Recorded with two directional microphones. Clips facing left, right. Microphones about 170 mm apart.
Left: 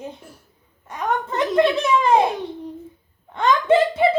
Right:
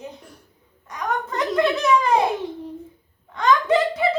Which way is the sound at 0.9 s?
25° left (ahead or behind).